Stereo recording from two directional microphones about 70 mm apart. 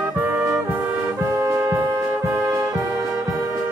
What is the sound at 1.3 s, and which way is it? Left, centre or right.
Music, right.